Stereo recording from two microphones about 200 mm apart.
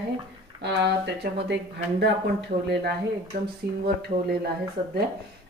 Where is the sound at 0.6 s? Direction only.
60° right (ahead or behind).